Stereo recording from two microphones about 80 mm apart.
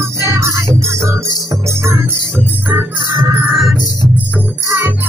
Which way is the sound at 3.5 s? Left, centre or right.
Centre.